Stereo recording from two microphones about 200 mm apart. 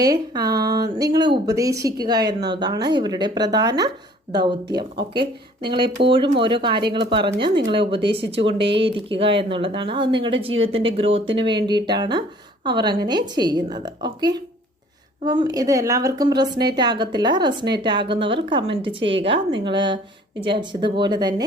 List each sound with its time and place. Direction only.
0.0 s speech: 20° right (ahead or behind)